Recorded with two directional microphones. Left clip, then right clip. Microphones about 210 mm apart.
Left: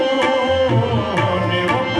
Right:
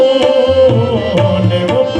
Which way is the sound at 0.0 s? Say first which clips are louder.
Right 8 dB; 50° right (ahead or behind).